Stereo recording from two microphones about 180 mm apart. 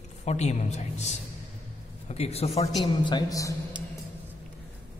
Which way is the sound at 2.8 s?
25° left (ahead or behind).